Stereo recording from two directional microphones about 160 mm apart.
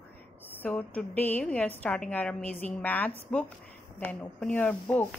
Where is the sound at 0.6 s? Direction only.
10° left (ahead or behind).